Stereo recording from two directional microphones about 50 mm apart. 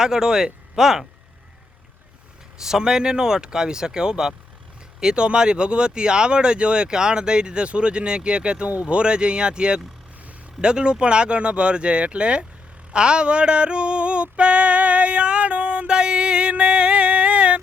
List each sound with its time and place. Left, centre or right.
0.0 s speech: centre
2.6 s speech: centre
12.9 s a sound: centre